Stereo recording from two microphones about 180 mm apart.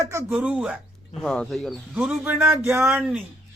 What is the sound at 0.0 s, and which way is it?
Speech, 15° right (ahead or behind).